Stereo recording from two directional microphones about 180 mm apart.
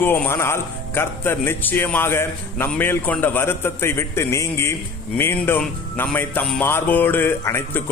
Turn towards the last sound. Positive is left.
turn(degrees=10)  # may be behind; listen again after turning